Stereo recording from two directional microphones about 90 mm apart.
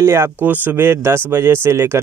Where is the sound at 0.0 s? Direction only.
25° right (ahead or behind).